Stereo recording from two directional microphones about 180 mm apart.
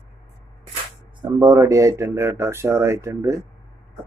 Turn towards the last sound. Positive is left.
turn(degrees=-15)  # may be behind; listen again after turning